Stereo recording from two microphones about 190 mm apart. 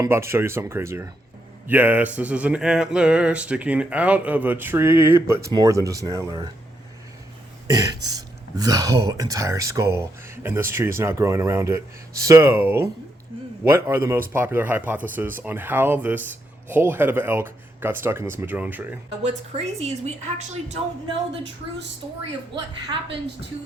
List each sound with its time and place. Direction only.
0.0 s speech: 15° right (ahead or behind)
7.7 s speech: 20° right (ahead or behind)
19.2 s a woman's voice: 35° right (ahead or behind)